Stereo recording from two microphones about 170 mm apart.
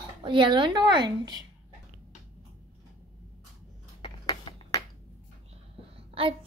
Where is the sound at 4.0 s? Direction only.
25° left (ahead or behind).